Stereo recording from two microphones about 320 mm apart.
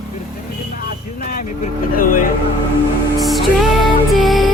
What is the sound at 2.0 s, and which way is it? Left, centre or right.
Speech, left.